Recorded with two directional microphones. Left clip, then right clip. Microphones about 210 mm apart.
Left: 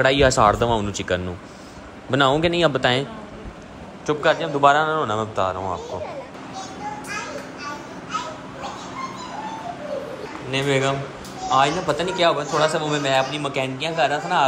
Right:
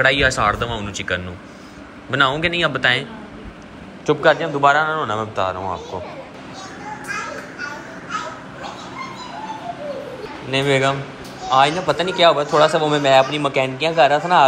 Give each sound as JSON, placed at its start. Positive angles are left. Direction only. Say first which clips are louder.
{"t": 0.0, "sound": "speech", "louder": "even", "side_deg": 15}
{"t": 4.0, "sound": "a man's voice", "louder": "right 4 dB", "side_deg": 0}
{"t": 4.6, "sound": "speech", "louder": "right 1 dB", "side_deg": 10}
{"t": 5.3, "sound": "a man's voice", "louder": "right 1 dB", "side_deg": 0}
{"t": 6.8, "sound": "children playing", "louder": "right 3 dB", "side_deg": 0}
{"t": 10.5, "sound": "a man's voice", "louder": "right 4 dB", "side_deg": 10}